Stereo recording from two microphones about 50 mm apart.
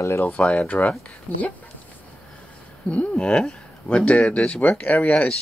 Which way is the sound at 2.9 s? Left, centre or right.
Left.